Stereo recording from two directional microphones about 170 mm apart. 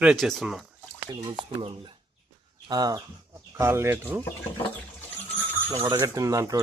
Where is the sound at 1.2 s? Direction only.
30° right (ahead or behind).